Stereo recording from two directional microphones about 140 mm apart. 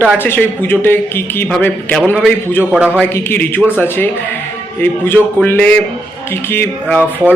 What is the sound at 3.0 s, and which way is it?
Speech, 15° left (ahead or behind).